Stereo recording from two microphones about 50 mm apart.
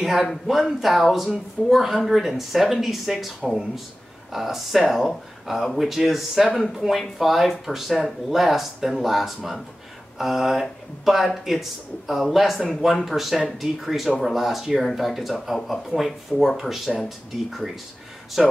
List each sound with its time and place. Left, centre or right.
0.3 s speech: centre